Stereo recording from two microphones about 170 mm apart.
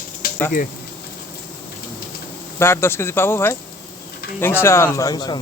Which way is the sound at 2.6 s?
15° left (ahead or behind).